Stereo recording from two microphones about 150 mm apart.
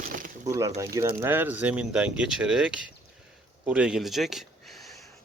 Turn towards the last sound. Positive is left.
turn(degrees=0)  # may be behind; listen again after turning